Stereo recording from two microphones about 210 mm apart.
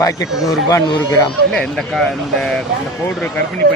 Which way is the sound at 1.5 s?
Centre (ahead or behind).